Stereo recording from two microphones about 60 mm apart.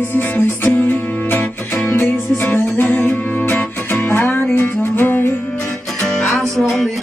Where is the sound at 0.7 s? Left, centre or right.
Left.